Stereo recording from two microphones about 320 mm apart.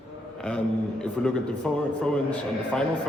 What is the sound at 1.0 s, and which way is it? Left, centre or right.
Speech, centre.